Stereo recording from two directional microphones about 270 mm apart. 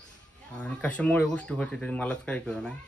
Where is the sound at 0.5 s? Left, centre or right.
Centre.